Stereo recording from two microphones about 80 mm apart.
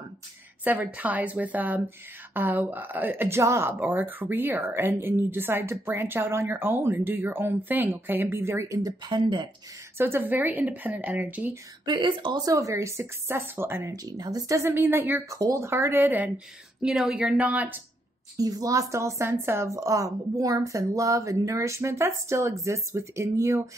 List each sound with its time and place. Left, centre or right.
0.7 s a woman's voice: right
3.8 s a woman's voice: right
9.0 s speech: right
9.9 s a woman's voice: right
11.8 s speech: right
12.4 s a woman's voice: right
13.9 s speech: right
14.6 s a woman's voice: right
15.2 s speech: right
15.6 s a woman's voice: right
16.8 s speech: centre
18.4 s a woman's voice: right